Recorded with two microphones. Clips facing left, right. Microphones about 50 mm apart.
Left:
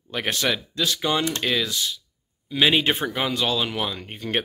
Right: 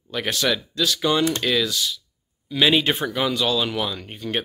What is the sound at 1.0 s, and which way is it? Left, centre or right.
Speech, centre.